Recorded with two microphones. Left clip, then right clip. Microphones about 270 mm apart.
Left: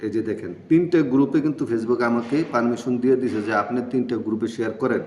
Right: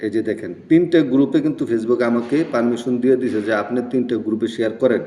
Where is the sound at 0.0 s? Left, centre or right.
Centre.